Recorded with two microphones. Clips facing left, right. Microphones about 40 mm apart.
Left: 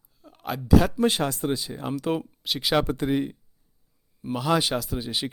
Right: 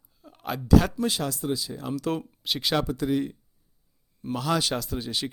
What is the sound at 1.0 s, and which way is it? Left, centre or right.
Speech, left.